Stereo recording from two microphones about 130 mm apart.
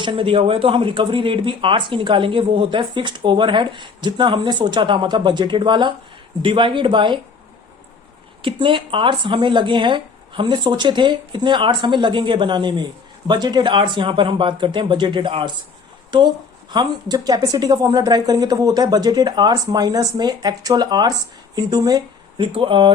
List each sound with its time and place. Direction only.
0.0 s speech: 40° right (ahead or behind)
8.4 s speech: 40° right (ahead or behind)